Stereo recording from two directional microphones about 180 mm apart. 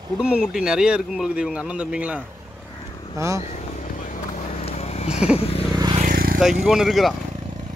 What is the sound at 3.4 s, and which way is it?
Vehicle, 40° left (ahead or behind).